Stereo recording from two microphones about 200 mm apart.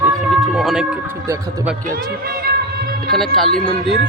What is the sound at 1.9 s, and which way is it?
Music, 50° right (ahead or behind).